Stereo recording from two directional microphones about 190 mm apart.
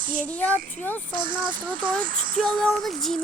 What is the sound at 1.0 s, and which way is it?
Speech, 45° right (ahead or behind).